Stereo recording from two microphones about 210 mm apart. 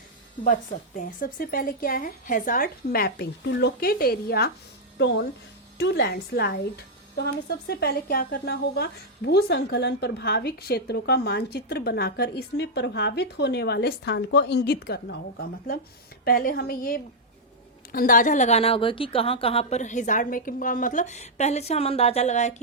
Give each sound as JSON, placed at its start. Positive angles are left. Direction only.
{"t": 0.4, "sound": "a woman's voice", "side_deg": 40}